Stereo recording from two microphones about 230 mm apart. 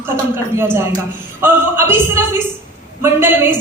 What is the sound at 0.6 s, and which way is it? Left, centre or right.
A woman's voice, centre.